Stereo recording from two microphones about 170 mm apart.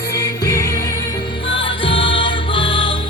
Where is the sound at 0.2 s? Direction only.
20° left (ahead or behind).